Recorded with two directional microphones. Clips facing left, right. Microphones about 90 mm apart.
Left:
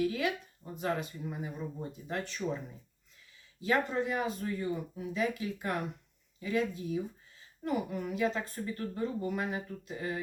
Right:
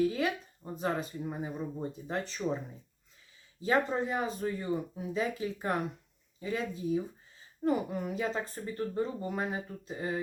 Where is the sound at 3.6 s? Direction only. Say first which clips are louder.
Right 1 dB; 30° right (ahead or behind).